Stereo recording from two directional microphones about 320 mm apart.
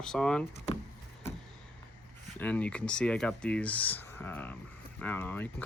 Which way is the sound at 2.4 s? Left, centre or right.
Centre.